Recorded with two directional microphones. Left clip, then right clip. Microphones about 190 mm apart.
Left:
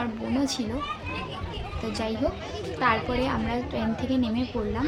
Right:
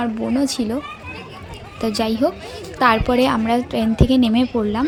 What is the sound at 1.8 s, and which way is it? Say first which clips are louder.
A woman's voice: right 10 dB; 45° right (ahead or behind).